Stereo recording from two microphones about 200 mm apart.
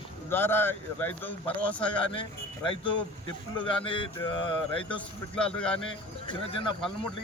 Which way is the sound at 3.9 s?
25° left (ahead or behind).